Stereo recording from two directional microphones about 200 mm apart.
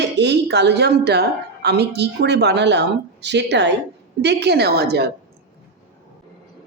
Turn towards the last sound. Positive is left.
turn(degrees=-55)  # may be behind; listen again after turning